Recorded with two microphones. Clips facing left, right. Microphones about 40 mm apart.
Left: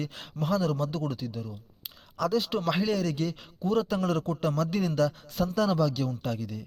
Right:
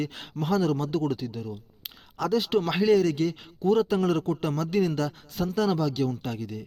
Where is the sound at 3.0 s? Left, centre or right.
Right.